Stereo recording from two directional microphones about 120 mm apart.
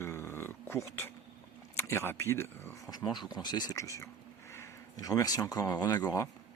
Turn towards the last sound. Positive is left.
turn(degrees=30)  # may be behind; listen again after turning